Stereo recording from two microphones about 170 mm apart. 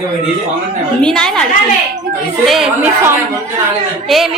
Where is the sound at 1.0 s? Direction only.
5° left (ahead or behind).